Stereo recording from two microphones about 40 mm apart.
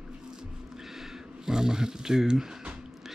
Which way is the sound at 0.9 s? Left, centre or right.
Centre.